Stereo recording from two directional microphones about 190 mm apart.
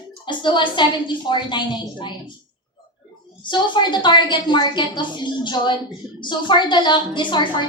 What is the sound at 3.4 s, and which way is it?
A woman's voice, 25° left (ahead or behind).